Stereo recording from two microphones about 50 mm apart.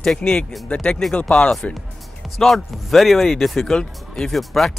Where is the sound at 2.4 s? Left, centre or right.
Centre.